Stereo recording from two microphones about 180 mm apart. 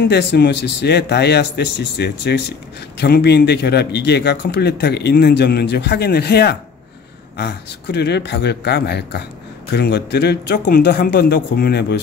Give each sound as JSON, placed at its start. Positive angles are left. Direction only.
{"t": 0.1, "sound": "a man's voice", "side_deg": 70}